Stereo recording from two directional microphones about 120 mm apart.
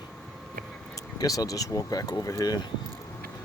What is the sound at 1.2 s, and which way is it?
Speech, 30° left (ahead or behind).